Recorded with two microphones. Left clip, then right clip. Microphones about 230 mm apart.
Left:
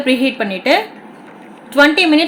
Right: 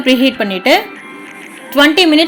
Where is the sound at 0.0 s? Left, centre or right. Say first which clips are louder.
Right 3 dB; centre.